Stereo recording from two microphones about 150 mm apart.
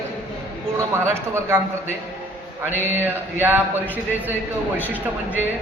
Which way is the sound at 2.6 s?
15° right (ahead or behind).